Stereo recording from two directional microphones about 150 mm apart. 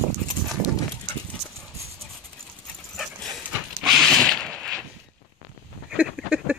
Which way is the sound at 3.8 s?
Centre (ahead or behind).